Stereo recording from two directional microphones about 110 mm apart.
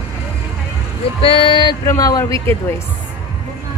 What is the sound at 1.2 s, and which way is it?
Speech, 55° left (ahead or behind).